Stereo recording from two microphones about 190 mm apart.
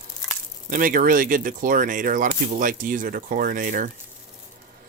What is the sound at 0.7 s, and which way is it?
Speech, 45° right (ahead or behind).